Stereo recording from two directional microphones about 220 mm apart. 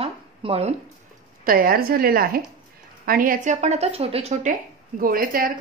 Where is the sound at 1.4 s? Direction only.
40° right (ahead or behind).